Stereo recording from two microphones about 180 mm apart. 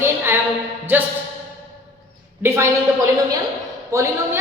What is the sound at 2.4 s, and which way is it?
Speech, 15° right (ahead or behind).